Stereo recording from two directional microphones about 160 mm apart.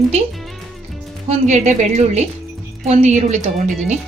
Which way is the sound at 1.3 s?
45° right (ahead or behind).